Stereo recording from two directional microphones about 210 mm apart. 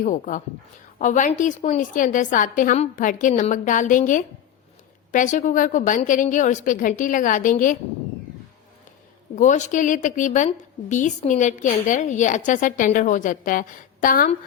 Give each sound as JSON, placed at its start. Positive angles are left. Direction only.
{"t": 0.0, "sound": "a woman's voice", "side_deg": 40}
{"t": 9.3, "sound": "a woman's voice", "side_deg": 35}